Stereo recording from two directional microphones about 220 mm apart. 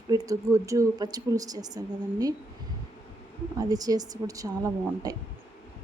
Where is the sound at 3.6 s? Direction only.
15° right (ahead or behind).